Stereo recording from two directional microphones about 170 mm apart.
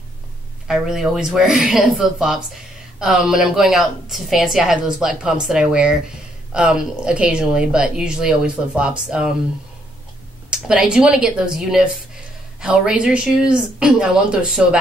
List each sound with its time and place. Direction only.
0.7 s a woman's voice: 5° right (ahead or behind)
10.5 s a woman's voice: 5° right (ahead or behind)